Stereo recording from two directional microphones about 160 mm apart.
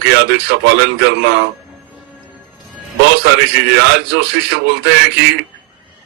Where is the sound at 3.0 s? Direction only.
90° right.